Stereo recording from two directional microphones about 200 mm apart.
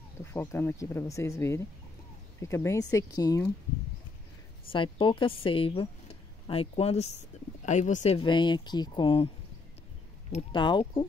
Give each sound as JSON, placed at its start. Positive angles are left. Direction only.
{"t": 0.2, "sound": "speech", "side_deg": 10}
{"t": 4.6, "sound": "speech", "side_deg": 25}
{"t": 8.2, "sound": "speech", "side_deg": 25}
{"t": 10.5, "sound": "speech", "side_deg": 25}